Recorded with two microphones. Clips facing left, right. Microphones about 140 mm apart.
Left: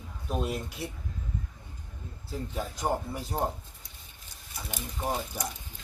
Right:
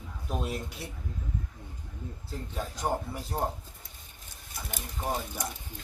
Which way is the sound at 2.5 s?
Centre (ahead or behind).